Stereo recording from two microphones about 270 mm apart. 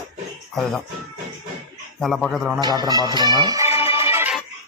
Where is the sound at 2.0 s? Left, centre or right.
Centre.